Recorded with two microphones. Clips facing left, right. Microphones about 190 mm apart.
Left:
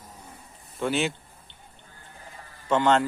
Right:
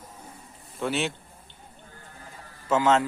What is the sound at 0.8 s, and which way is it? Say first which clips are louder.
Speech: left 2 dB; centre (ahead or behind).